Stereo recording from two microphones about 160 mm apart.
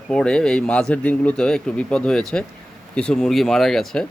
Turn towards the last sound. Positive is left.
turn(degrees=5)  # may be behind; listen again after turning